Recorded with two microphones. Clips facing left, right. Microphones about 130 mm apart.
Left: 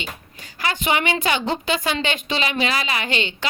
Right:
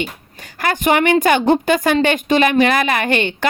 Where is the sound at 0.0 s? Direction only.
55° right (ahead or behind).